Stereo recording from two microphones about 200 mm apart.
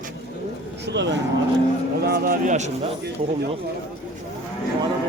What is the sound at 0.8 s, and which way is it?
Speech, 60° right (ahead or behind).